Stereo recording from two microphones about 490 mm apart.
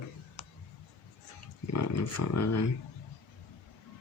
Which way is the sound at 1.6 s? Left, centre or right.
Left.